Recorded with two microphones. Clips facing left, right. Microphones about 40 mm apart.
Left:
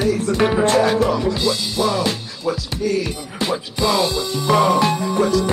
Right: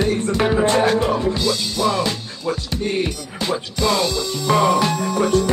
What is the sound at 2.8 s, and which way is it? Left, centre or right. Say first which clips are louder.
Speech: left 2 dB; right.